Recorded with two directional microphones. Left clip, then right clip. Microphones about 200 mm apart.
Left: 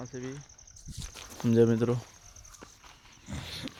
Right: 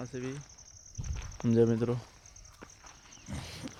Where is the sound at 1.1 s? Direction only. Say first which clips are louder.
Left 2 dB; 30° left (ahead or behind).